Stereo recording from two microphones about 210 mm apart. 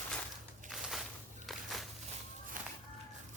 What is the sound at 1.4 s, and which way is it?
Walk, centre (ahead or behind).